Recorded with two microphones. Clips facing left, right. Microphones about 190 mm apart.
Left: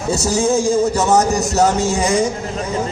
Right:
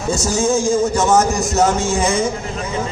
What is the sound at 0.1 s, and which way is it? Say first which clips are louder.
A man's voice: left 1 dB; 35° left (ahead or behind).